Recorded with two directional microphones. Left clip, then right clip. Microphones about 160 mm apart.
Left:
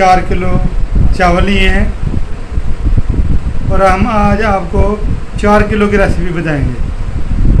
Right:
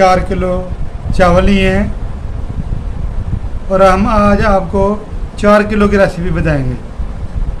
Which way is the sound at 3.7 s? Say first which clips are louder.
Right 1 dB; 50° right (ahead or behind).